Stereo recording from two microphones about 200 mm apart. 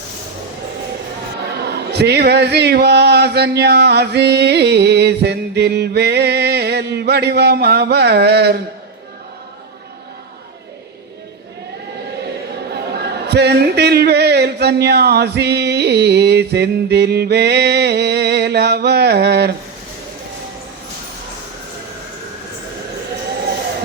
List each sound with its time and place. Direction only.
1.5 s speech: 55° right (ahead or behind)
12.7 s speech: 55° right (ahead or behind)